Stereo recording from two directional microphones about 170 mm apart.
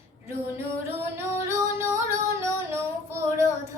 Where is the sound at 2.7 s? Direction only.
15° right (ahead or behind).